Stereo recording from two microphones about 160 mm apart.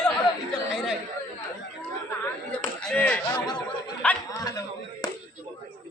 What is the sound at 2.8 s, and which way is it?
Speech, 5° left (ahead or behind).